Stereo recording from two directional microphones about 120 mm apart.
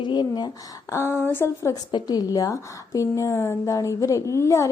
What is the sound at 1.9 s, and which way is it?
A woman's voice, 35° left (ahead or behind).